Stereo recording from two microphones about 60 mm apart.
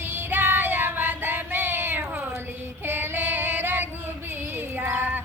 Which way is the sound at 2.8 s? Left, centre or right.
Right.